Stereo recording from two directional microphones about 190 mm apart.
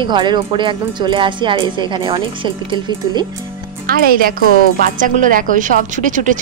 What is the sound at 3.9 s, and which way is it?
A woman's voice, 50° right (ahead or behind).